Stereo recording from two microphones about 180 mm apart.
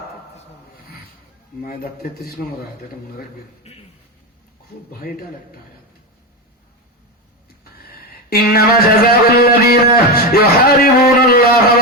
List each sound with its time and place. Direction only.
1.6 s music: 55° left (ahead or behind)
3.6 s a sound: 35° left (ahead or behind)
4.9 s music: 55° left (ahead or behind)
8.3 s music: 55° left (ahead or behind)